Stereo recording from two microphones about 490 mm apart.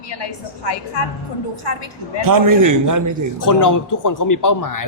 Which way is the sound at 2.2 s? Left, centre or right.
Right.